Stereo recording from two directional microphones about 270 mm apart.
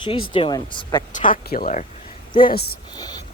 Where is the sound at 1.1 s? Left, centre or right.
Left.